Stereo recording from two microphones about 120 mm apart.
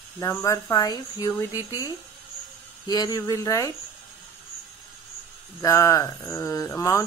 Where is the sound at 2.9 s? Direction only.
30° left (ahead or behind).